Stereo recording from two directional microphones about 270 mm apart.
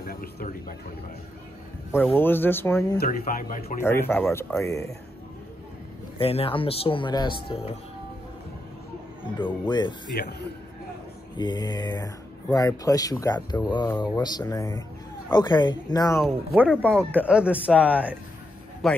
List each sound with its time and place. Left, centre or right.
0.0 s a sound: left
2.1 s speech: centre
3.0 s speech: left
3.8 s speech: centre
6.1 s speech: left
9.5 s speech: centre
11.3 s speech: centre
16.5 s speech: centre